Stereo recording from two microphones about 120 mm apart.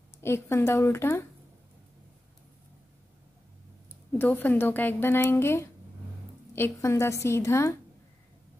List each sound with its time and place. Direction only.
0.2 s a woman's voice: 20° left (ahead or behind)
4.2 s a woman's voice: 15° left (ahead or behind)